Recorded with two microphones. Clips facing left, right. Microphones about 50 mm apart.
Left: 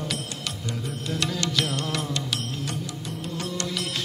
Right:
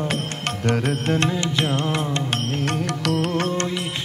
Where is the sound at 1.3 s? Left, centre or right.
Right.